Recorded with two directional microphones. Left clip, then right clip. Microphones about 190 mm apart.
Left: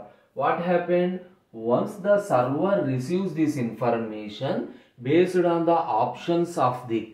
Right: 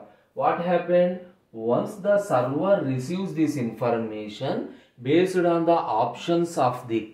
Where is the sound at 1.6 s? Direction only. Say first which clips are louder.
Left 1 dB; 15° right (ahead or behind).